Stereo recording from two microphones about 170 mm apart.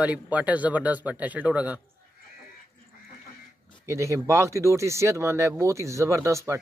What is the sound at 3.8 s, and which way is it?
A man's voice, 15° right (ahead or behind).